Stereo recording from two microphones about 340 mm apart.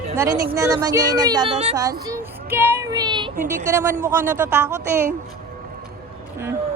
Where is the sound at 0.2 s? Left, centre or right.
Centre.